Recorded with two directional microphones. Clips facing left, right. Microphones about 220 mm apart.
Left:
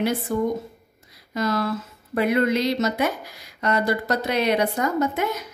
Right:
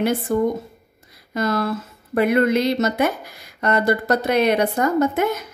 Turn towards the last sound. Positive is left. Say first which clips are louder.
# right 4 dB
turn(degrees=-50)  # may be behind; listen again after turning